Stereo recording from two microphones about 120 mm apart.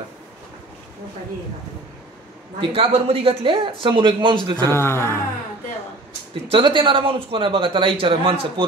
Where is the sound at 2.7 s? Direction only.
55° right (ahead or behind).